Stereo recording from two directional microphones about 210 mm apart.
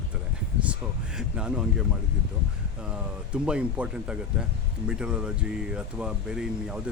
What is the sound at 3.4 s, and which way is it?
Speech, 5° right (ahead or behind).